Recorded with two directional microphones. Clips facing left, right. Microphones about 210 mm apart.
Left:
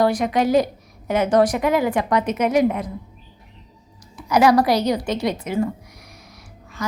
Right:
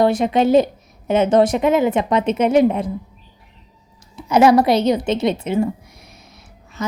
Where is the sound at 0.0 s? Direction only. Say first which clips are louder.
Right 3 dB; 25° right (ahead or behind).